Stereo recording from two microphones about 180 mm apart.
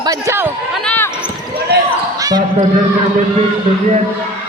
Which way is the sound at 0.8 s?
10° left (ahead or behind).